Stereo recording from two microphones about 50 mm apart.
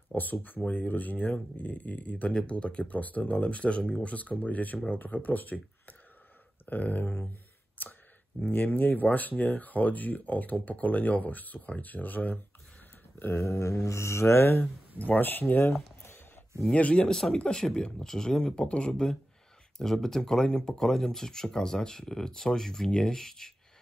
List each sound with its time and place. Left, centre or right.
0.1 s speech: left
6.6 s a sound: left
8.4 s speech: left
13.4 s mantra: left
14.5 s speech: left
16.9 s speech: centre